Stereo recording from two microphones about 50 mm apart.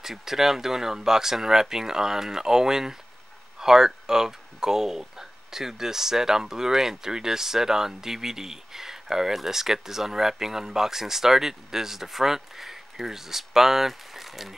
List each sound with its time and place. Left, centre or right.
0.0 s speech: centre